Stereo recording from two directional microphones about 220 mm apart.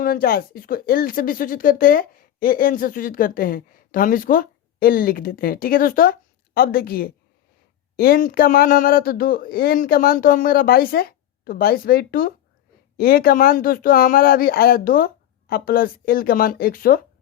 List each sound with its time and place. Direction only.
0.0 s speech: 40° left (ahead or behind)